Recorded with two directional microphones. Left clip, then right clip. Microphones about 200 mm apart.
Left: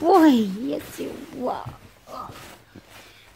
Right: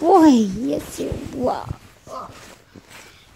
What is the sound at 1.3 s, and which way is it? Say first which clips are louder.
Speech: right 5 dB; 25° right (ahead or behind).